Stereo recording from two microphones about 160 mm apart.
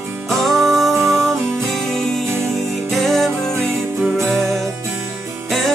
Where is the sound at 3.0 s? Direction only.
Centre (ahead or behind).